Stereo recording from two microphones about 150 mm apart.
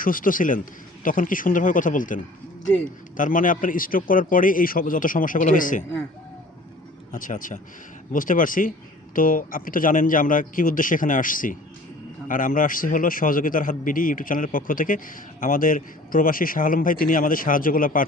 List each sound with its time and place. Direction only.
0.0 s a man's voice: 65° left (ahead or behind)
7.1 s a man's voice: 60° left (ahead or behind)